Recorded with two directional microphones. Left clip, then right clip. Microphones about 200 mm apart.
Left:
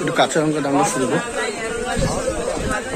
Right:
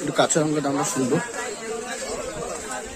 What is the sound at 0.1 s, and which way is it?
Speech, 10° right (ahead or behind).